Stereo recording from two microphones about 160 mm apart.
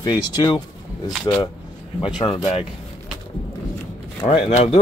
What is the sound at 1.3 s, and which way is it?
Speech, 25° left (ahead or behind).